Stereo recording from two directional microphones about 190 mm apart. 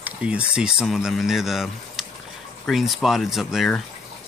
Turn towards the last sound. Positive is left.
turn(degrees=0)  # may be behind; listen again after turning